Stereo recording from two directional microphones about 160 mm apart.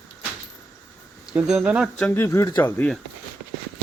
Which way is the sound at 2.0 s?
15° left (ahead or behind).